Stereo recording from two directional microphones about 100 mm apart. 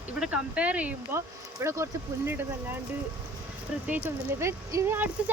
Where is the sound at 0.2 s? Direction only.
10° right (ahead or behind).